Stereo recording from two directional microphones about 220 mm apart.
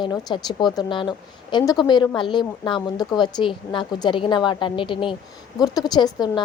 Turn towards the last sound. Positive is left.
turn(degrees=20)  # may be behind; listen again after turning